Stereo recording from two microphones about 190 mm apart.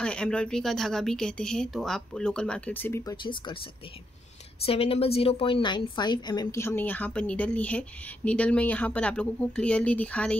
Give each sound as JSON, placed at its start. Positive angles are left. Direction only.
{"t": 0.0, "sound": "speech", "side_deg": 5}
{"t": 4.6, "sound": "a woman's voice", "side_deg": 30}